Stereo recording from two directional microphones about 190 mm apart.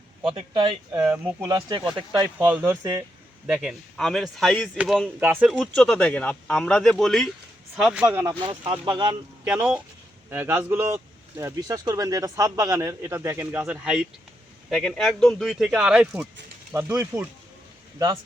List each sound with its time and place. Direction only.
0.3 s speech: 25° right (ahead or behind)
0.9 s speech: 15° right (ahead or behind)
5.2 s speech: 10° right (ahead or behind)
5.5 s speech: 5° left (ahead or behind); by 9.1 s 25° right (ahead or behind)
9.5 s speech: 5° right (ahead or behind)